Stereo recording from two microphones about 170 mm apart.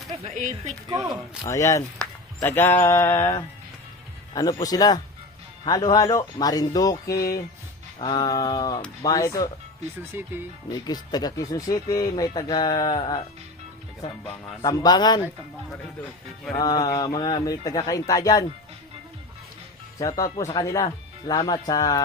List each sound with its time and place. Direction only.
0.3 s speech: 45° right (ahead or behind)
0.9 s speech: 25° right (ahead or behind)
1.5 s a sound: 20° left (ahead or behind)
4.4 s speech: 20° left (ahead or behind)
10.0 s speech: 15° right (ahead or behind)
10.7 s speech: 25° left (ahead or behind)
14.6 s speech: 20° left (ahead or behind)
16.6 s speech: 25° left (ahead or behind)
20.0 s speech: 20° left (ahead or behind)